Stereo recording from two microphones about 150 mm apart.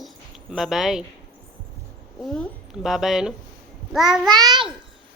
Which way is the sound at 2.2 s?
5° left (ahead or behind).